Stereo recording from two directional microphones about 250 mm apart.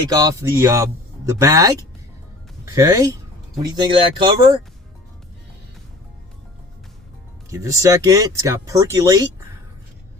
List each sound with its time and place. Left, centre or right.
0.1 s speech: centre
7.5 s speech: centre